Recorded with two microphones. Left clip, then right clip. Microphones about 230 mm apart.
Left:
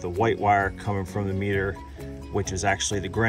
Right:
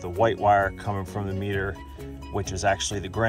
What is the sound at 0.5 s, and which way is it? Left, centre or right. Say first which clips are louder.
Speech: right 1 dB; right.